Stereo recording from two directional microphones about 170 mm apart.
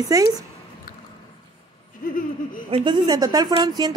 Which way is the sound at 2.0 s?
55° left (ahead or behind).